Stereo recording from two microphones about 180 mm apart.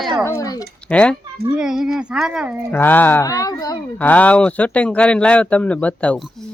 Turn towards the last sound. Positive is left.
turn(degrees=5)  # may be behind; listen again after turning